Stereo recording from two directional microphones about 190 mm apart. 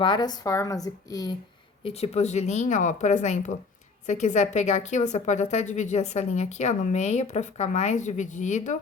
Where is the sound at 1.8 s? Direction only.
30° left (ahead or behind).